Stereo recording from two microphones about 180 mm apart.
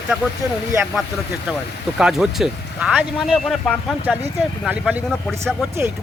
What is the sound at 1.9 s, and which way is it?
Speech, centre (ahead or behind).